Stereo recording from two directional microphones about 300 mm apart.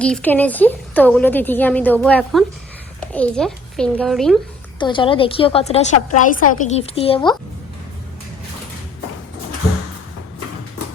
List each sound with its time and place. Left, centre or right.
0.0 s a woman's voice: centre
4.8 s a woman's voice: centre